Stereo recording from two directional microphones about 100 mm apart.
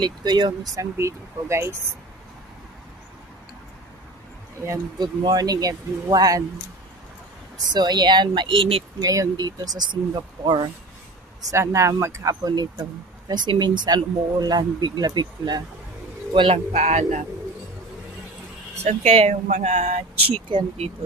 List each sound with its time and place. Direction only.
0.0 s speech: 50° right (ahead or behind)
0.7 s speech: 30° right (ahead or behind)
4.9 s speech: 45° right (ahead or behind)
7.7 s speech: 45° right (ahead or behind)
9.0 s speech: 35° right (ahead or behind)
11.5 s speech: 30° right (ahead or behind); by 15.6 s 45° right (ahead or behind)
16.3 s speech: 75° right (ahead or behind); by 17.0 s 90° right
18.8 s speech: 90° right; by 20.9 s 70° right (ahead or behind)